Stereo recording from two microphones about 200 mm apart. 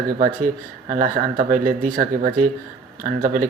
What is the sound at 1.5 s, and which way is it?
Speech, 40° right (ahead or behind).